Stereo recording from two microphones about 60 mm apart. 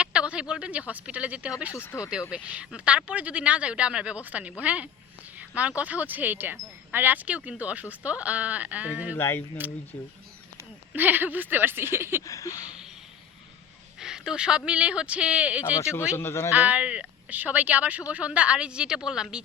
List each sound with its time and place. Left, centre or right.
0.0 s speech: centre
1.9 s speech: left
2.3 s speech: centre
9.1 s speech: left
9.6 s speech: right
10.9 s a woman's voice: right
12.2 s a sound: left
14.0 s speech: centre
15.8 s speech: left
16.6 s speech: right